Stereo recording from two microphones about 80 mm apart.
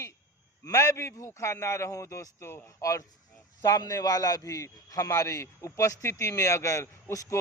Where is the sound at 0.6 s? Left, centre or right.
Left.